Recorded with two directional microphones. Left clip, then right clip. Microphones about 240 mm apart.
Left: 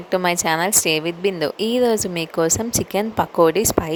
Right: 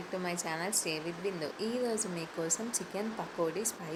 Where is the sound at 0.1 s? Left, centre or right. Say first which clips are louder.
Left 18 dB; left.